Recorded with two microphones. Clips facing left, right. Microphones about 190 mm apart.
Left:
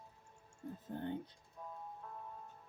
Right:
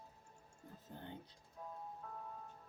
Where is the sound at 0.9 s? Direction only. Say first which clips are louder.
Left 10 dB; 55° left (ahead or behind).